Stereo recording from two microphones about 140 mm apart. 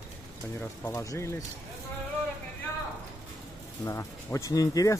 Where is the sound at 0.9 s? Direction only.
20° left (ahead or behind).